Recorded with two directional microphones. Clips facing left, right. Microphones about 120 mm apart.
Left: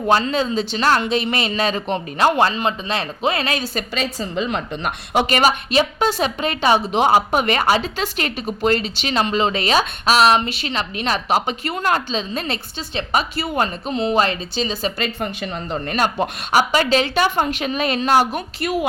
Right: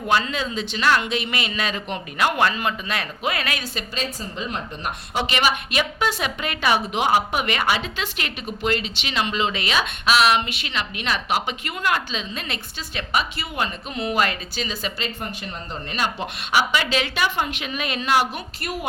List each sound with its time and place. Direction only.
0.1 s a woman's voice: 35° left (ahead or behind)
3.9 s a woman's voice: 75° left (ahead or behind)
5.2 s a woman's voice: 40° left (ahead or behind)
13.9 s speech: 30° left (ahead or behind)
14.9 s a woman's voice: 65° left (ahead or behind); by 18.4 s 40° left (ahead or behind)